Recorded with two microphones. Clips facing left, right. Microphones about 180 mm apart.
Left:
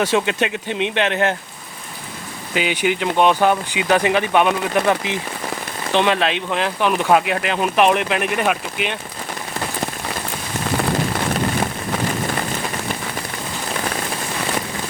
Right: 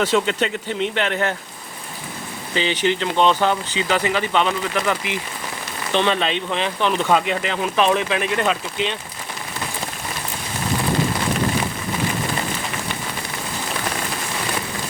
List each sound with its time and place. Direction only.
0.0 s speech: 15° left (ahead or behind)
2.6 s speech: 10° left (ahead or behind)
6.1 s speech: 5° left (ahead or behind)